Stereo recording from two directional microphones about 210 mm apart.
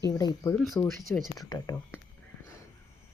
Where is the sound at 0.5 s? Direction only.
5° left (ahead or behind).